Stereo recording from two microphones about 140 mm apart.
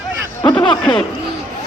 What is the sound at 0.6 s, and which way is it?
Speech, 35° left (ahead or behind).